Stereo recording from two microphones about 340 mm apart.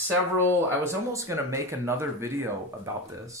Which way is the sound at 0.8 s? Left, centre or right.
Centre.